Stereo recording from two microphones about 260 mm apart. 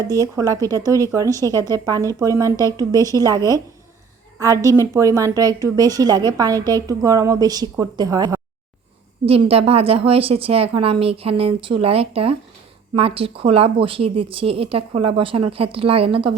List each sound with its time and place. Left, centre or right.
0.3 s a woman's voice: centre
1.5 s a woman's voice: centre
1.8 s a woman's voice: centre